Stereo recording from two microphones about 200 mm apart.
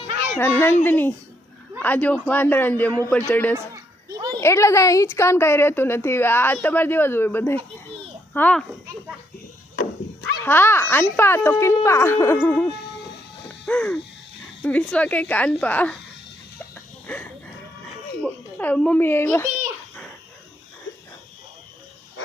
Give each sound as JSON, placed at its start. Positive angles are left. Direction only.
{"t": 0.3, "sound": "a woman's voice", "side_deg": 10}
{"t": 3.5, "sound": "a sound", "side_deg": -15}
{"t": 4.4, "sound": "a woman's voice", "side_deg": 15}
{"t": 9.7, "sound": "goat", "side_deg": 50}
{"t": 10.4, "sound": "a woman's voice", "side_deg": 10}
{"t": 13.7, "sound": "a sound", "side_deg": 5}
{"t": 14.6, "sound": "a woman's voice", "side_deg": 5}
{"t": 18.2, "sound": "speech", "side_deg": 10}